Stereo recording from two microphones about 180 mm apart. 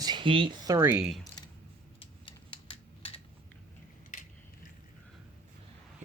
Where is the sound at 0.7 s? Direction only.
15° right (ahead or behind).